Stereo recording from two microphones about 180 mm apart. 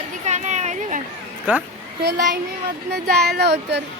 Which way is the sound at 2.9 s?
65° right (ahead or behind).